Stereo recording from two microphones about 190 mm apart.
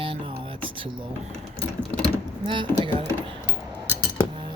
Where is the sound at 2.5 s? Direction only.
25° right (ahead or behind).